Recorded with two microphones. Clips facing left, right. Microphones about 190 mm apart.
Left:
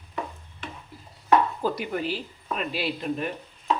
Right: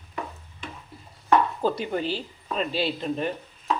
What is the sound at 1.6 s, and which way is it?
Speech, 25° right (ahead or behind).